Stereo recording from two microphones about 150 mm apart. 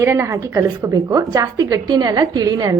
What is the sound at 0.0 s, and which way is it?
A woman's voice, 20° right (ahead or behind).